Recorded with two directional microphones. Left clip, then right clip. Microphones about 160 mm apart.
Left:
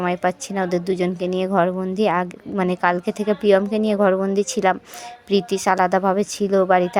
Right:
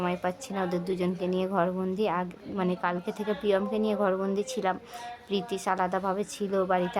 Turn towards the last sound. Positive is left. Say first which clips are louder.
# left 10 dB
turn(degrees=35)  # may be behind; listen again after turning